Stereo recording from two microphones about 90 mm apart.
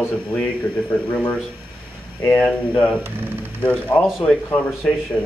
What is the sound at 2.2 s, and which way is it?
Speech, 15° left (ahead or behind).